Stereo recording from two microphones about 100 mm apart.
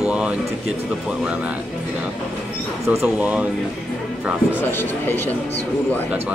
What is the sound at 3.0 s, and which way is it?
Speech, 15° right (ahead or behind).